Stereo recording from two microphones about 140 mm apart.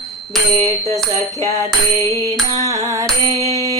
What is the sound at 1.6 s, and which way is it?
Music, 20° left (ahead or behind).